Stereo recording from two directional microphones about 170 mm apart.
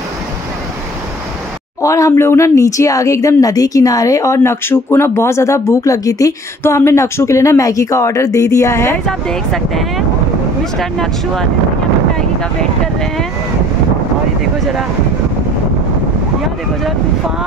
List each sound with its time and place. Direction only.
1.8 s speech: 20° left (ahead or behind)
9.0 s speech: centre (ahead or behind)
14.6 s speech: centre (ahead or behind)